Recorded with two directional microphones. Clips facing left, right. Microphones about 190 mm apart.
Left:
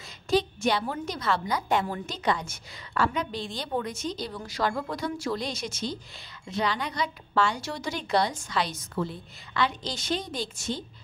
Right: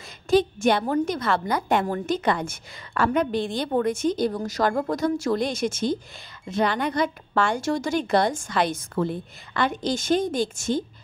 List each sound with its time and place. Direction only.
0.3 s a woman's voice: 50° right (ahead or behind)